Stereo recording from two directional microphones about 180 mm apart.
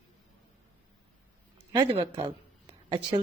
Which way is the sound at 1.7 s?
25° right (ahead or behind).